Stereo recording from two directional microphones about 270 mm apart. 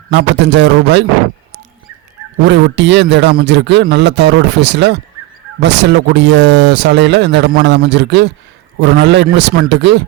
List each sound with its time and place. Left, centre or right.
0.1 s speech: right
2.4 s speech: right